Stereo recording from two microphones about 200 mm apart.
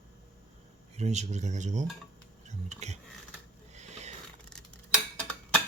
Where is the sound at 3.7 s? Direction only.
35° right (ahead or behind).